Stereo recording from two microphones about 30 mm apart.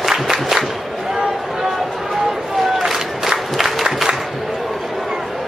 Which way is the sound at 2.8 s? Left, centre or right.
Centre.